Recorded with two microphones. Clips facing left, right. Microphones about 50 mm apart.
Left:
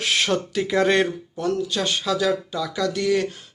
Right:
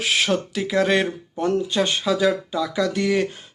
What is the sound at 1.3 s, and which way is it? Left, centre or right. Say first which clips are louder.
Speech: right 3 dB; right.